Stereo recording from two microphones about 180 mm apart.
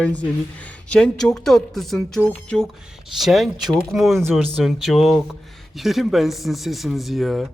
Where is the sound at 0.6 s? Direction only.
5° left (ahead or behind).